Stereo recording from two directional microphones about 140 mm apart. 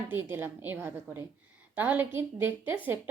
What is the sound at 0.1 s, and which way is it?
A woman's voice, 15° right (ahead or behind).